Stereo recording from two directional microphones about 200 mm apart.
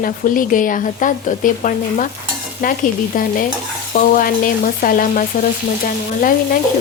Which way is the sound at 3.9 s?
45° left (ahead or behind).